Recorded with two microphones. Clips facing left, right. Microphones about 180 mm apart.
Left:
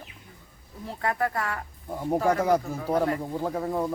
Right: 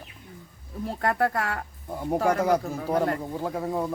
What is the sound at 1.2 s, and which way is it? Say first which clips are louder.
Speech: right 3 dB; 60° right (ahead or behind).